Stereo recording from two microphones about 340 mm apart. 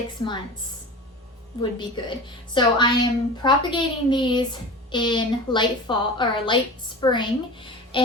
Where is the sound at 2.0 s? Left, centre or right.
Centre.